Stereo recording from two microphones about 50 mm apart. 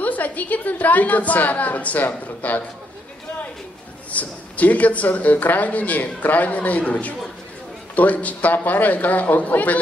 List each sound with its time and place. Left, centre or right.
0.0 s speech: left
4.1 s speech: left